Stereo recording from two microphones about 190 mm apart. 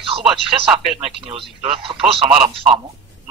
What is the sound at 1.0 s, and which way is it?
Speech, 30° right (ahead or behind).